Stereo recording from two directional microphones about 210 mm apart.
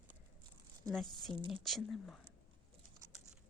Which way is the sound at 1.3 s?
25° right (ahead or behind).